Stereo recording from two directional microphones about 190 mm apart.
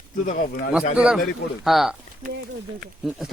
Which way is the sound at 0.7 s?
5° right (ahead or behind).